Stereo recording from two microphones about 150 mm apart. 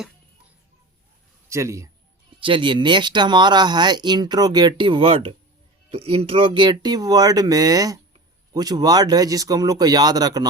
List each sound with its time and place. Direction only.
1.5 s a man's voice: 20° right (ahead or behind)
2.4 s speech: 35° right (ahead or behind)